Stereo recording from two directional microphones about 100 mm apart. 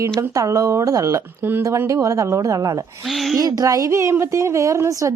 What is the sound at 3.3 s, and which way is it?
Speech, 40° right (ahead or behind).